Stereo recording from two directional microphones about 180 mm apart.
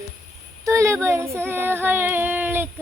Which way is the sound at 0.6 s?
15° right (ahead or behind).